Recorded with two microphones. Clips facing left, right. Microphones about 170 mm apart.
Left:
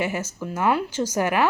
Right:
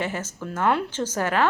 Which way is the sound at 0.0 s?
10° left (ahead or behind).